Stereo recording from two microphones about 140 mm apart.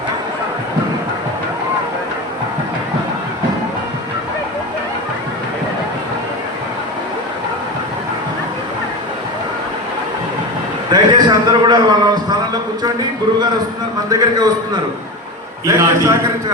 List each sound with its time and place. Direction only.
10.8 s a man's voice: 30° right (ahead or behind)
14.1 s a man's voice: 30° right (ahead or behind)
15.6 s a man's voice: 20° right (ahead or behind)